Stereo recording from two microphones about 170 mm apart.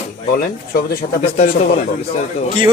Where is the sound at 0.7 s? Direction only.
60° left (ahead or behind).